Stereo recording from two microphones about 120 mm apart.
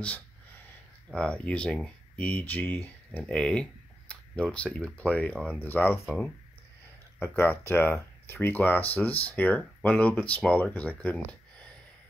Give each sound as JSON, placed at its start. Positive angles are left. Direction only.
{"t": 1.1, "sound": "speech", "side_deg": 10}
{"t": 4.1, "sound": "a sound", "side_deg": 10}
{"t": 4.8, "sound": "speech", "side_deg": 10}
{"t": 7.2, "sound": "speech", "side_deg": 20}